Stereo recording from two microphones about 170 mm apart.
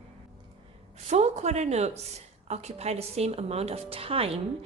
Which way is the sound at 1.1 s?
40° right (ahead or behind).